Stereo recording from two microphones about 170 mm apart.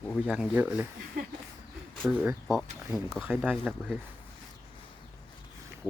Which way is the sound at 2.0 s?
10° right (ahead or behind).